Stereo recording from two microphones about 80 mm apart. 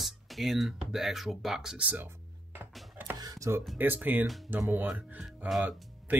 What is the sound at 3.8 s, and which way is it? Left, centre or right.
Speech, right.